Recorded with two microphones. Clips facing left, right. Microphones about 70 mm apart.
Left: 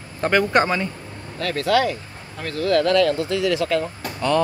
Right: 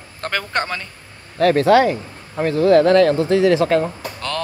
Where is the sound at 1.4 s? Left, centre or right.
Right.